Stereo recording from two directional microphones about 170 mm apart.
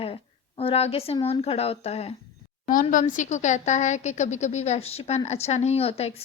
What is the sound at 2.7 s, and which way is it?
A woman's voice, 50° left (ahead or behind).